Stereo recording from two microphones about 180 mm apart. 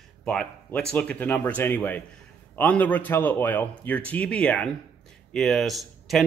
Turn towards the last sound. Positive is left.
turn(degrees=0)  # may be behind; listen again after turning